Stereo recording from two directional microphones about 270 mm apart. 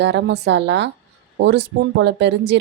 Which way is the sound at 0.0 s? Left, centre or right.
Right.